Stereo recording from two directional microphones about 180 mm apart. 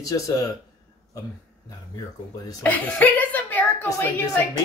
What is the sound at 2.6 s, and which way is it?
A woman's voice, 10° left (ahead or behind).